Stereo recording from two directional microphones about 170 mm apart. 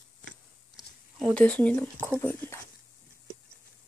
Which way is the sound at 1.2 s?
5° left (ahead or behind).